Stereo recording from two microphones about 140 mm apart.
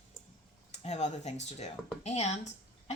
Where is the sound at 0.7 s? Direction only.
55° left (ahead or behind).